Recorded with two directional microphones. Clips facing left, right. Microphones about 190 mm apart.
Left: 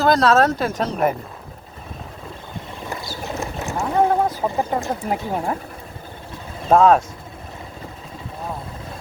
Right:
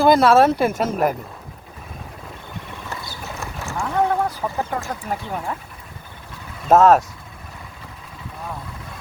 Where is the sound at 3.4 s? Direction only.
20° left (ahead or behind).